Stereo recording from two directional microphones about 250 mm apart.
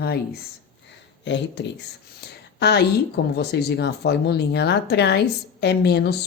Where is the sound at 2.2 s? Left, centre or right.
Left.